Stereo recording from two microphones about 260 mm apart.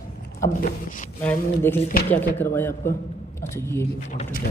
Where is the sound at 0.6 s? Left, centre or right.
Left.